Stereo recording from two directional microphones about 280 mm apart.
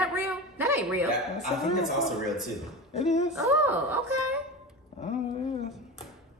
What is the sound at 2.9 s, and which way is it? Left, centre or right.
Speech, left.